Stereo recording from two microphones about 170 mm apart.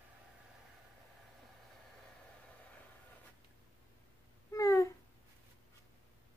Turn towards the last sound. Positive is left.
turn(degrees=20)  # may be behind; listen again after turning